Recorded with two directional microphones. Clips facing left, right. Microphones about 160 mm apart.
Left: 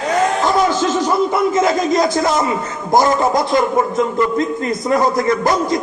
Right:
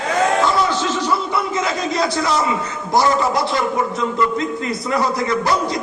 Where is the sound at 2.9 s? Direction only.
45° left (ahead or behind).